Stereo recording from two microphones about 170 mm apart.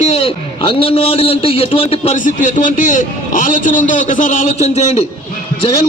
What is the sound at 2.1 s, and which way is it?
A man's voice, 50° left (ahead or behind).